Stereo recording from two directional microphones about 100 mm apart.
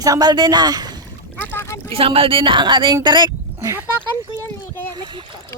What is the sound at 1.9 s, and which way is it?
A woman's voice, 70° right (ahead or behind).